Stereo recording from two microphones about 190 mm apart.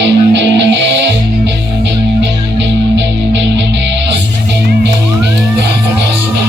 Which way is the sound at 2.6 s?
70° right (ahead or behind).